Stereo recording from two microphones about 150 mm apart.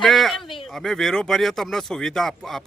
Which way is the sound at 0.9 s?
Centre (ahead or behind).